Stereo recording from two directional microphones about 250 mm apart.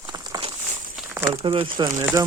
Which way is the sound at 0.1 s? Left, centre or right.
Centre.